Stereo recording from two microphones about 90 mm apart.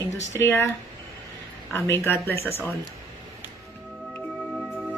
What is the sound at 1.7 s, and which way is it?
Speech, 25° left (ahead or behind).